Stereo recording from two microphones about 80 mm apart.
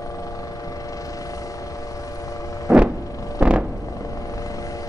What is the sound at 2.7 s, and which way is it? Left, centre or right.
Vehicle, centre.